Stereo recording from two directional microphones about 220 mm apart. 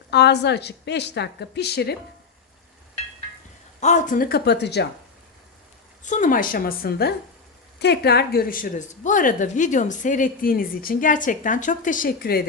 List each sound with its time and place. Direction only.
0.1 s a woman's voice: 50° left (ahead or behind)
3.8 s a woman's voice: 35° left (ahead or behind); by 4.9 s 50° left (ahead or behind)
6.0 s a woman's voice: 35° left (ahead or behind)